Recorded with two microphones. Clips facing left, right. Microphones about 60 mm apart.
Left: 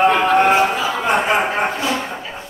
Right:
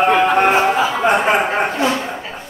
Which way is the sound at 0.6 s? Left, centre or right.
Right.